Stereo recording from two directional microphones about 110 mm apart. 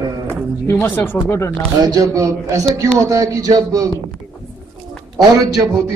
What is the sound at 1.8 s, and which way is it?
A man's voice, 35° right (ahead or behind).